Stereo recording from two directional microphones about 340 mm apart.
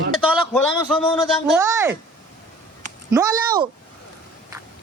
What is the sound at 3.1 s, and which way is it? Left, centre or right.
Speech, centre.